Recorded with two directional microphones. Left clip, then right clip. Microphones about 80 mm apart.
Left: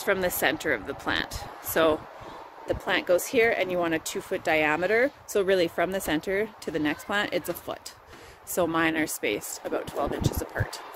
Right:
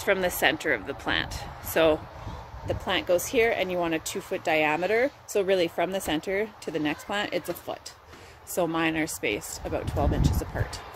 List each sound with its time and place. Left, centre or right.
0.0 s speech: left
5.3 s speech: left
8.5 s speech: left